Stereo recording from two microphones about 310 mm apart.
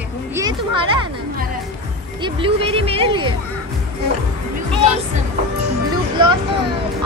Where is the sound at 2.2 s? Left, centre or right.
Centre.